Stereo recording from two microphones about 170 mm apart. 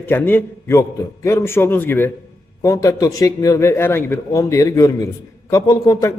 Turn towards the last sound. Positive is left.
turn(degrees=20)  # may be behind; listen again after turning